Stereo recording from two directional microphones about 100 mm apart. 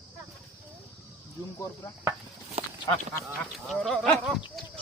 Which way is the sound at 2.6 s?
90° right.